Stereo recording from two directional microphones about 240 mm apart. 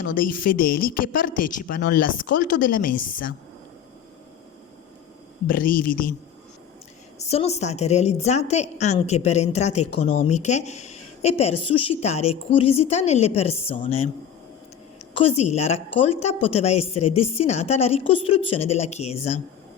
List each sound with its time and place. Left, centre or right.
0.1 s speech: left
5.5 s speech: left
7.2 s a woman's voice: left
15.2 s a woman's voice: left